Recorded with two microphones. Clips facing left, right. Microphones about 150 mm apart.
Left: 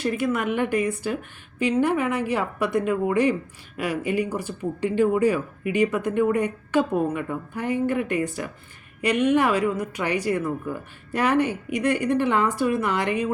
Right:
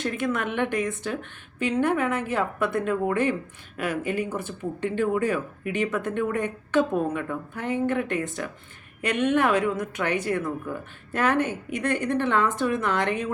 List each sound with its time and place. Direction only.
0.0 s speech: 10° left (ahead or behind)
4.3 s speech: 40° left (ahead or behind)
4.8 s speech: 10° left (ahead or behind)